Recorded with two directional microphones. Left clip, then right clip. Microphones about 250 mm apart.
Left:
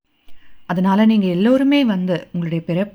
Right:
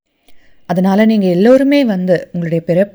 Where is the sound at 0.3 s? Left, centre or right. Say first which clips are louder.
Right 6 dB; centre.